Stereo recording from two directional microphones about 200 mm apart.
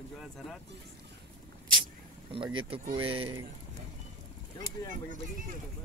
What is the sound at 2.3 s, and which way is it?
Speech, 25° right (ahead or behind).